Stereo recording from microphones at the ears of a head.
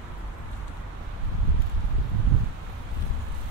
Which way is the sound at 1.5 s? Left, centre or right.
Right.